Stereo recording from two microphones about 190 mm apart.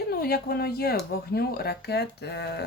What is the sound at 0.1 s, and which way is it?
Speech, 55° left (ahead or behind).